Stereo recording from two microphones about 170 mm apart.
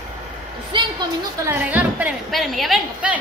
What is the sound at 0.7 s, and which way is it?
Speech, 30° right (ahead or behind).